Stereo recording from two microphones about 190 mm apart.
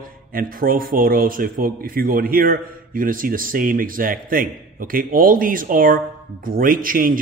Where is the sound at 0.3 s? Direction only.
50° right (ahead or behind).